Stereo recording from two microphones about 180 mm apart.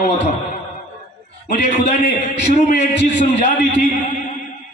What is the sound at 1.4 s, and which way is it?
A man's voice, 40° left (ahead or behind).